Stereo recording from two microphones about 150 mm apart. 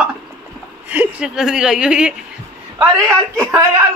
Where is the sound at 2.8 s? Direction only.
25° right (ahead or behind).